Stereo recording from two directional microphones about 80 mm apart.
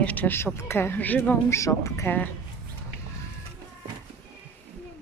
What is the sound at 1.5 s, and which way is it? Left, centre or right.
Speech, left.